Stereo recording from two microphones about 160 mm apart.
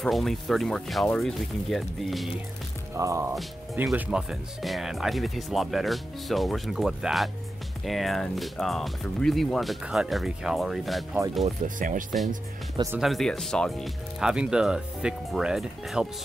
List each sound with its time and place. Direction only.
0.0 s speech: centre (ahead or behind)
2.9 s music: 20° right (ahead or behind)
3.7 s speech: 10° right (ahead or behind)
11.4 s speech: 55° right (ahead or behind)
12.9 s speech: centre (ahead or behind)